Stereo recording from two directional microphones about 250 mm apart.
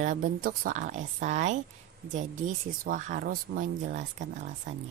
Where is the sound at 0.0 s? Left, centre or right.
Right.